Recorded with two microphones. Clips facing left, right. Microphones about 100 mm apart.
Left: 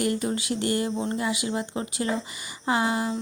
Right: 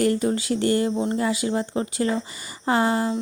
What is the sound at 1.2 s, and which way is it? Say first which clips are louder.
A woman's voice: right 4 dB; 35° right (ahead or behind).